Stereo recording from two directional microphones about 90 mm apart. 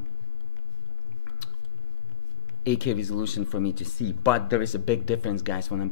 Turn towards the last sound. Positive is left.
turn(degrees=25)  # may be behind; listen again after turning